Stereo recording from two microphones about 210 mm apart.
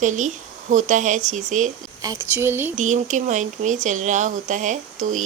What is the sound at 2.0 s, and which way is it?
Speech, 15° right (ahead or behind).